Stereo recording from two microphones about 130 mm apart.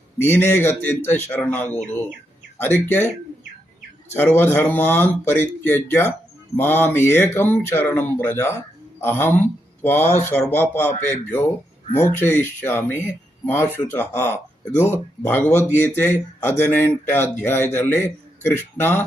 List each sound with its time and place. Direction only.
0.2 s speech: 15° left (ahead or behind)
4.4 s speech: 15° left (ahead or behind)